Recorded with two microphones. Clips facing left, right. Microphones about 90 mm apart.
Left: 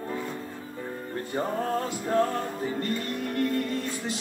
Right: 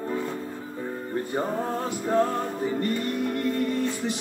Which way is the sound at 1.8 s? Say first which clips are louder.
Right 4 dB; 20° right (ahead or behind).